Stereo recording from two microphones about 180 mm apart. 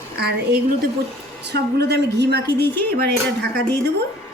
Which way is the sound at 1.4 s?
70° right (ahead or behind).